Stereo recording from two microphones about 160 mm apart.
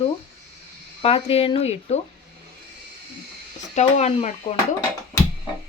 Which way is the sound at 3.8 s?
45° left (ahead or behind).